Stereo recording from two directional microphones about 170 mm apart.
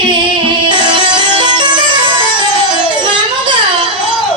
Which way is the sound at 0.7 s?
30° right (ahead or behind).